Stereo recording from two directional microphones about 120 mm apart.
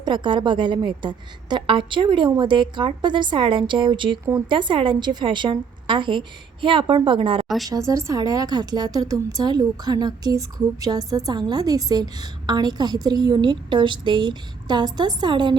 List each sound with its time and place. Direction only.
0.0 s a woman's voice: 40° right (ahead or behind)
7.4 s a woman's voice: centre (ahead or behind)
7.7 s a woman's voice: 25° right (ahead or behind)